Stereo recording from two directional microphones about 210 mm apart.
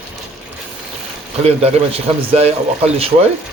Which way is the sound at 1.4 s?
30° right (ahead or behind).